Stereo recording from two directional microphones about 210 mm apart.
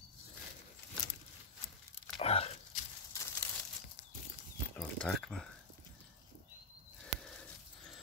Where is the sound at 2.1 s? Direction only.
30° left (ahead or behind).